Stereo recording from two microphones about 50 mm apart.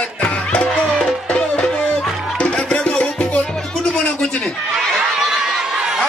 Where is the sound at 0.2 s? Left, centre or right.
Left.